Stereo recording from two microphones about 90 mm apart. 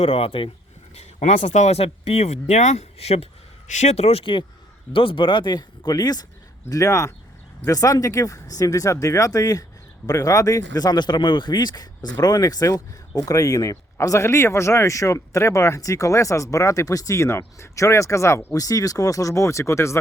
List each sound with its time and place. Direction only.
0.0 s speech: 90° left
4.2 s speech: 65° left (ahead or behind); by 20.0 s 30° left (ahead or behind)